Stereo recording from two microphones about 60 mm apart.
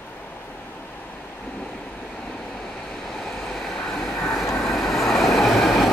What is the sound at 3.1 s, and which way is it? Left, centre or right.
Train, centre.